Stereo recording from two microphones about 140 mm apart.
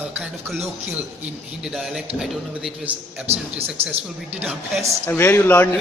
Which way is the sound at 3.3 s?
45° right (ahead or behind).